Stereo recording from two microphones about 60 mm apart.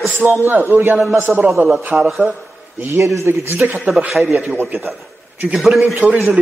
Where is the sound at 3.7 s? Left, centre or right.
Right.